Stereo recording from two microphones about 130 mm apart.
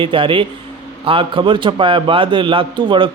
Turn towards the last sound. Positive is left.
turn(degrees=-40)  # may be behind; listen again after turning